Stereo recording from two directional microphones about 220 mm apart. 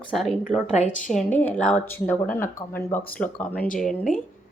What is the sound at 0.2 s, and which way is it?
Speech, centre (ahead or behind).